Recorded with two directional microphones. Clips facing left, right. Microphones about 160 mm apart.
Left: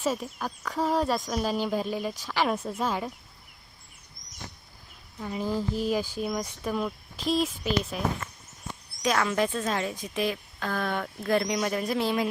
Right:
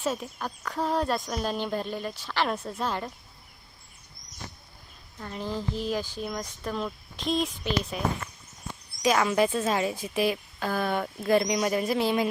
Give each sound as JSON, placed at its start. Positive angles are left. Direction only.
{"t": 0.0, "sound": "speech", "side_deg": 5}
{"t": 5.2, "sound": "speech", "side_deg": 10}